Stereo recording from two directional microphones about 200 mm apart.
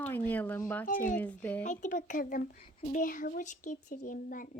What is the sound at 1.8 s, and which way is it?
Speech, 40° left (ahead or behind).